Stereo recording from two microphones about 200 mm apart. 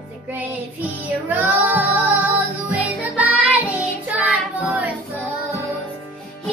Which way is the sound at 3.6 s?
5° right (ahead or behind).